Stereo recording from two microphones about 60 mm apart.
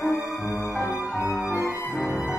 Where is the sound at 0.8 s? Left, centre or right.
Left.